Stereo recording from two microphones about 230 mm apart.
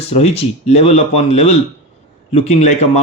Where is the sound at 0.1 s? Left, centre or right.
Left.